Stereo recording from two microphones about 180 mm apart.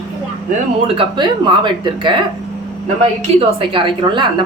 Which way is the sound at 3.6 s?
25° right (ahead or behind).